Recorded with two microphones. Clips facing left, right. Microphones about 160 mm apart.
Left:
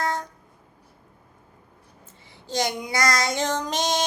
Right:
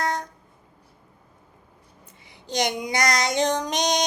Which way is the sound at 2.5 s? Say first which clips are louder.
Right 1 dB; 20° right (ahead or behind).